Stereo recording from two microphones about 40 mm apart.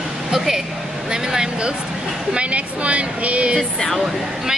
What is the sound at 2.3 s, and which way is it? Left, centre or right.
Speech, right.